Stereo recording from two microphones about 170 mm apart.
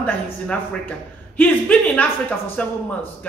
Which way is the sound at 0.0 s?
10° left (ahead or behind).